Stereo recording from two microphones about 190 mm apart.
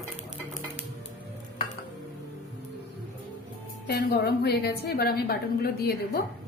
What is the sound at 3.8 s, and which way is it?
A woman's voice, 60° left (ahead or behind).